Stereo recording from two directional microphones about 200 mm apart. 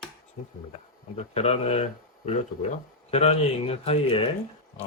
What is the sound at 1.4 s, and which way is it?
Speech, 30° left (ahead or behind).